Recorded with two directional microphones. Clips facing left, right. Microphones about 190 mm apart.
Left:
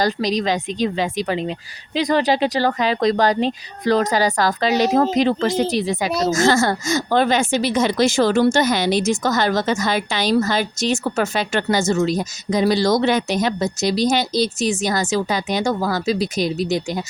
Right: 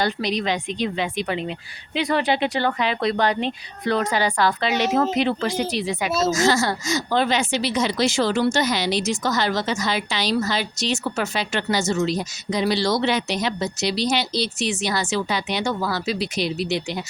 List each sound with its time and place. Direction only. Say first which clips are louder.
0.0 s speech: left 4 dB; 40° left (ahead or behind)
6.3 s speech: left 3 dB; 50° left (ahead or behind)